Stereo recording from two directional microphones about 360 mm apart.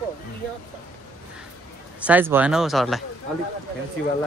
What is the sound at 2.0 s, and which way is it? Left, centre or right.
Speech, centre.